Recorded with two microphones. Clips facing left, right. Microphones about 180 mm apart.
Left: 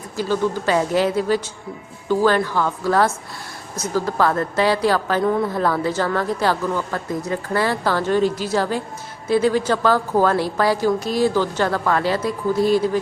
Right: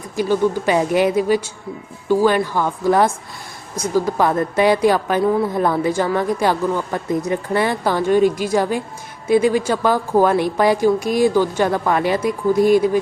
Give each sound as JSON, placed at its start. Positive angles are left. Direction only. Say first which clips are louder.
{"t": 0.2, "sound": "a woman's voice", "louder": "right 4 dB", "side_deg": -15}
{"t": 5.2, "sound": "speech", "louder": "right 3 dB", "side_deg": -5}
{"t": 5.5, "sound": "a woman's voice", "louder": "right 2 dB", "side_deg": -15}